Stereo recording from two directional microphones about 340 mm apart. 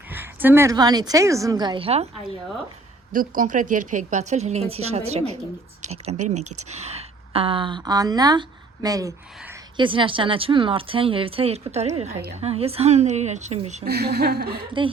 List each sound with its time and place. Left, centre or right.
0.1 s speech: centre
3.1 s speech: right